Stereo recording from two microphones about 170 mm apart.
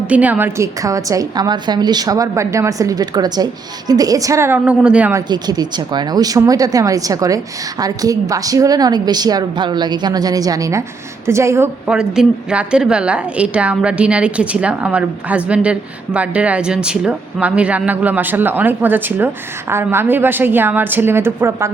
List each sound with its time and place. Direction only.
0.1 s speech: 10° right (ahead or behind)
5.1 s a woman's voice: 25° right (ahead or behind)
11.9 s a woman's voice: 5° right (ahead or behind)